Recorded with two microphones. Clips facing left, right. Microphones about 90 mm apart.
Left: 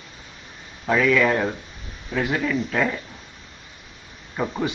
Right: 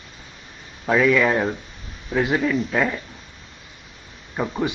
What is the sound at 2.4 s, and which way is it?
Speech, centre (ahead or behind).